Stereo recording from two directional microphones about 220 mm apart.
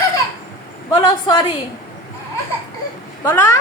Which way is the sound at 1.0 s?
20° left (ahead or behind).